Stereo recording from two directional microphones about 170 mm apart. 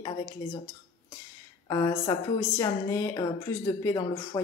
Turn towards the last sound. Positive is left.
turn(degrees=20)  # may be behind; listen again after turning